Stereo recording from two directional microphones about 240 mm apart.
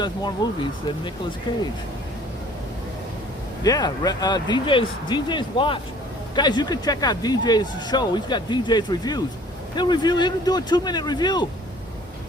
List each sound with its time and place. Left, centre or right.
0.0 s speech: centre
3.6 s speech: centre